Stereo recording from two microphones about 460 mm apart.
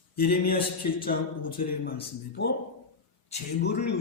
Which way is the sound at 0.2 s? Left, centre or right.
Centre.